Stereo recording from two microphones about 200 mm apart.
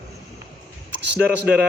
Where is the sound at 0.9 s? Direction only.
55° right (ahead or behind).